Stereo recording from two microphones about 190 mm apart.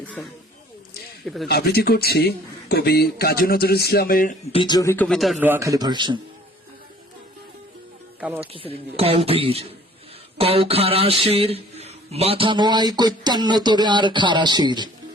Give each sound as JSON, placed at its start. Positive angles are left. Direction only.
{"t": 0.2, "sound": "speech", "side_deg": 5}
{"t": 1.5, "sound": "a man's voice", "side_deg": 55}
{"t": 4.5, "sound": "speech", "side_deg": 25}
{"t": 5.0, "sound": "speech", "side_deg": 0}
{"t": 5.4, "sound": "speech", "side_deg": -15}
{"t": 8.2, "sound": "speech", "side_deg": -10}
{"t": 8.5, "sound": "speech", "side_deg": -30}